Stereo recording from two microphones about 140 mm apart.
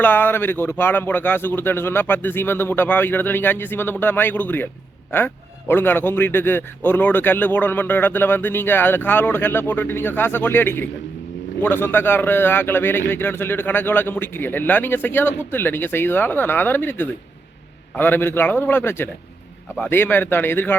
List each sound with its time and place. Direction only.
0.0 s a man's voice: 15° left (ahead or behind)